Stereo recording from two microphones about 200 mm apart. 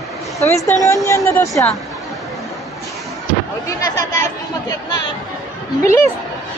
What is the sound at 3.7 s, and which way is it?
Chatter, 15° left (ahead or behind).